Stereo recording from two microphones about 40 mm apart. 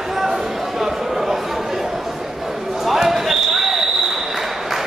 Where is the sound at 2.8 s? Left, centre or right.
Centre.